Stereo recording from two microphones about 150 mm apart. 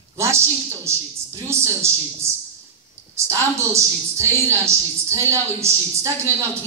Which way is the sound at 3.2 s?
20° right (ahead or behind).